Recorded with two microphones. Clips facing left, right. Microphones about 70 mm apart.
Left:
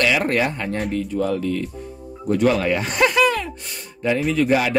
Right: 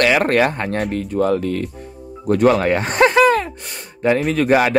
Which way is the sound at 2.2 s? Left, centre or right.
Right.